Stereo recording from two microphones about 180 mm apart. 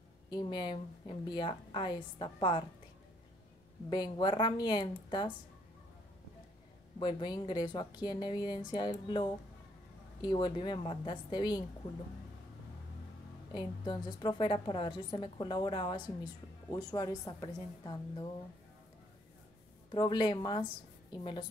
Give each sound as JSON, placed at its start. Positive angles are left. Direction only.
{"t": 0.3, "sound": "a woman's voice", "side_deg": 25}
{"t": 3.9, "sound": "a woman's voice", "side_deg": 25}
{"t": 7.0, "sound": "a woman's voice", "side_deg": 25}
{"t": 13.5, "sound": "a woman's voice", "side_deg": 25}
{"t": 19.9, "sound": "a woman's voice", "side_deg": 25}